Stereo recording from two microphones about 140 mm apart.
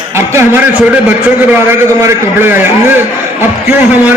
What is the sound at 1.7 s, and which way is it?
A man's voice, 20° right (ahead or behind).